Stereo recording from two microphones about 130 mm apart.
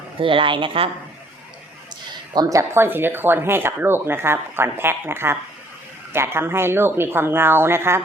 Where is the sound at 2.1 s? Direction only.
30° right (ahead or behind).